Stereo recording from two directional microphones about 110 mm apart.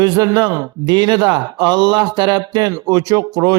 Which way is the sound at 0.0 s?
35° right (ahead or behind).